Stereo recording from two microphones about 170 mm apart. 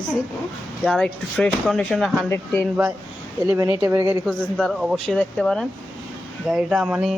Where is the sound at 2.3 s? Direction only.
10° left (ahead or behind).